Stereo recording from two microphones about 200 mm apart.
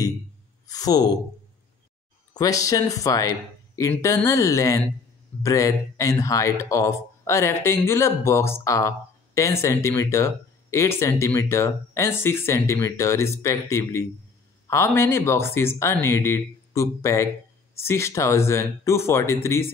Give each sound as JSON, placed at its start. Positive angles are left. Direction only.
{"t": 0.7, "sound": "speech", "side_deg": 20}
{"t": 2.3, "sound": "speech", "side_deg": 15}